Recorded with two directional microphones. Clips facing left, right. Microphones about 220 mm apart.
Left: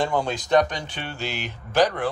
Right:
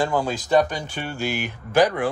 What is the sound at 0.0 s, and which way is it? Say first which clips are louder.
Speech: right 1 dB; 5° right (ahead or behind).